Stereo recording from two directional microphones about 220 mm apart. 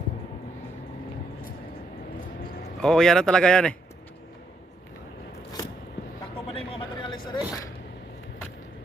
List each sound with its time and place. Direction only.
2.8 s speech: centre (ahead or behind)
6.5 s vehicle: 25° left (ahead or behind)